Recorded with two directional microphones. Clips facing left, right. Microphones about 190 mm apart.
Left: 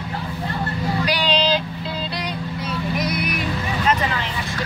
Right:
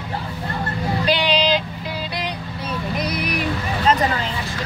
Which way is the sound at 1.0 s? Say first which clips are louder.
Right 2 dB; 25° right (ahead or behind).